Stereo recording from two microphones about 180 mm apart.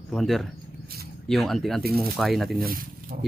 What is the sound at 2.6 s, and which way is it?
Speech, 55° right (ahead or behind).